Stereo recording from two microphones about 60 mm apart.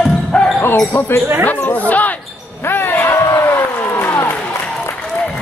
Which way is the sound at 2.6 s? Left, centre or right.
Left.